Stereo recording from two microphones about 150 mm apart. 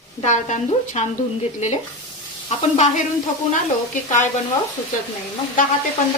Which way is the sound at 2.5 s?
50° left (ahead or behind).